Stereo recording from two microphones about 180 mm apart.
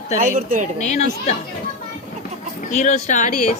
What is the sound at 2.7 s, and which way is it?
Speech, 40° left (ahead or behind).